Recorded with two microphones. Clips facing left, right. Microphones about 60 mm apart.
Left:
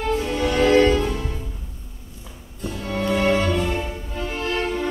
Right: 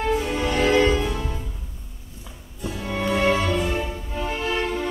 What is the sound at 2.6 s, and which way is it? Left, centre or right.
Music, centre.